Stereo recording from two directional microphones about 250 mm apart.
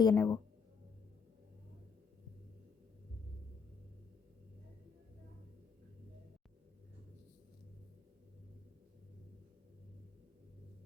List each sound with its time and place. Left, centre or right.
0.0 s speech: centre